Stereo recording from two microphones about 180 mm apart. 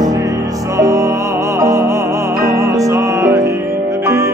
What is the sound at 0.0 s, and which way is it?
Music, 20° right (ahead or behind).